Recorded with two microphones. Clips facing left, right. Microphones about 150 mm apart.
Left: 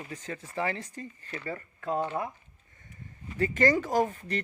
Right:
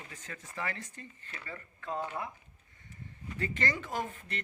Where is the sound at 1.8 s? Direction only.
20° left (ahead or behind).